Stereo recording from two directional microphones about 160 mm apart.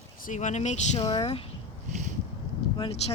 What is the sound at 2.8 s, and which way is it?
Speech, 40° left (ahead or behind).